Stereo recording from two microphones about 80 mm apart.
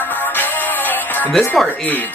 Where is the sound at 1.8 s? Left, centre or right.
Left.